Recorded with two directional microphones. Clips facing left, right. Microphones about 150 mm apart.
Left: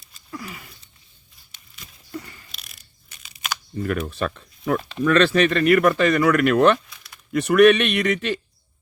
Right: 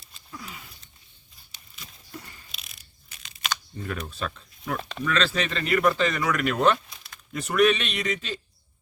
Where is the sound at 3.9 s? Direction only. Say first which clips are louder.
Left 7 dB; 60° left (ahead or behind).